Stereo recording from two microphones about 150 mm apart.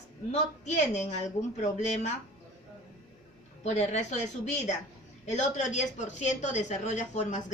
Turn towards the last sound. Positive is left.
turn(degrees=50)  # may be behind; listen again after turning